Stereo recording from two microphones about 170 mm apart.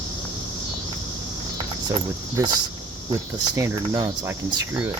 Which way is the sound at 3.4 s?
20° right (ahead or behind).